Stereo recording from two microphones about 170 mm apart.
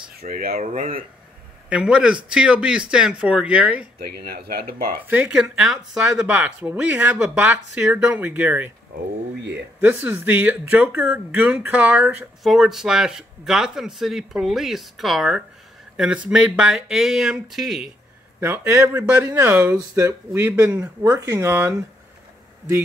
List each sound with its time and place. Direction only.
0.1 s speech: 65° right (ahead or behind)
0.6 s speech: 50° right (ahead or behind)
1.7 s speech: 5° right (ahead or behind)
4.0 s speech: 65° right (ahead or behind)
5.1 s speech: 5° right (ahead or behind)
9.8 s speech: 10° right (ahead or behind)
18.4 s speech: 15° right (ahead or behind)